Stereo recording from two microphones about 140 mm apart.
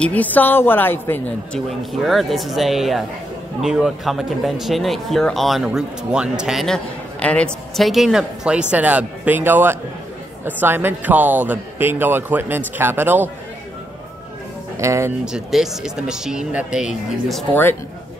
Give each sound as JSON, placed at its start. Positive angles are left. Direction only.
{"t": 0.0, "sound": "speech", "side_deg": 10}
{"t": 1.7, "sound": "speech", "side_deg": 0}
{"t": 14.8, "sound": "speech", "side_deg": -20}
{"t": 15.2, "sound": "speech", "side_deg": -5}